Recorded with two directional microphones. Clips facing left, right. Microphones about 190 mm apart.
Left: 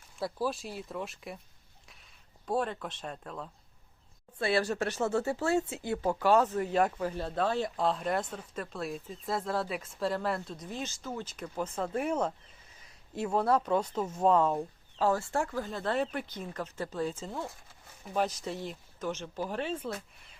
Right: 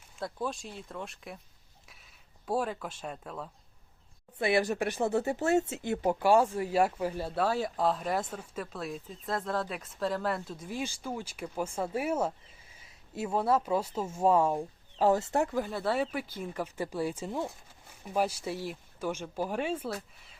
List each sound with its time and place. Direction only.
0.2 s speech: 5° left (ahead or behind)
2.5 s speech: 5° right (ahead or behind)
4.4 s speech: 15° right (ahead or behind)